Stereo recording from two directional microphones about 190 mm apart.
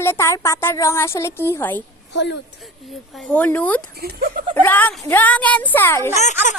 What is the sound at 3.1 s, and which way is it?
Speech, 10° left (ahead or behind).